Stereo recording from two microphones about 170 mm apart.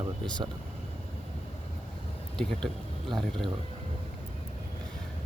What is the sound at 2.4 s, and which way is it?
Speech, 5° left (ahead or behind).